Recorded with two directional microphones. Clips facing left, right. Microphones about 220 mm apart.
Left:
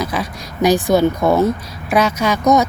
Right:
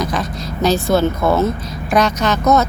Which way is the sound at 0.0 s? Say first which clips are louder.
Right 1 dB; 10° left (ahead or behind).